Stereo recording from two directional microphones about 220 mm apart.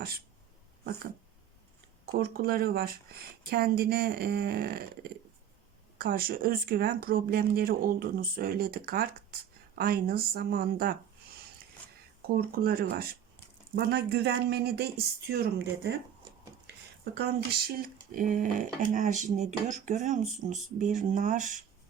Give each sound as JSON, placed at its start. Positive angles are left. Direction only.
{"t": 2.1, "sound": "speech", "side_deg": -40}
{"t": 12.4, "sound": "speech", "side_deg": -40}
{"t": 17.2, "sound": "speech", "side_deg": -40}